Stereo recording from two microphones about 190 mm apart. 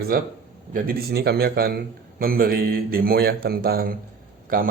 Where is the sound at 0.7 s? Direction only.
50° right (ahead or behind).